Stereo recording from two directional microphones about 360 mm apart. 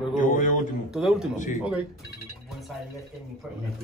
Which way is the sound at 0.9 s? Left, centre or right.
Centre.